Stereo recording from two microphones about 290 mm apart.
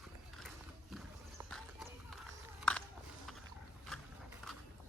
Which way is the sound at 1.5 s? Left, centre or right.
Centre.